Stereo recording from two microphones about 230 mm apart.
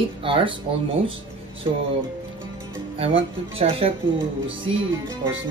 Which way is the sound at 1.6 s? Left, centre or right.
Right.